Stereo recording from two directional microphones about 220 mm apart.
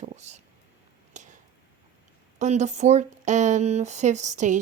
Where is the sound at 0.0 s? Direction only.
30° right (ahead or behind).